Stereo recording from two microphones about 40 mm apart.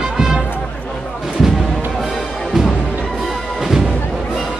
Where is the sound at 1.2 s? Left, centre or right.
Centre.